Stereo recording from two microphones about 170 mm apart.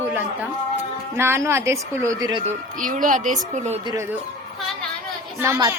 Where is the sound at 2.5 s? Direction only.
50° right (ahead or behind).